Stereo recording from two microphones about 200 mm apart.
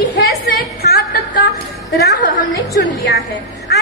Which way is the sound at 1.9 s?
55° left (ahead or behind).